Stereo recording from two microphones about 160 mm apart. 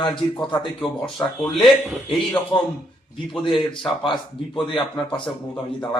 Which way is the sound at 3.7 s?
30° left (ahead or behind).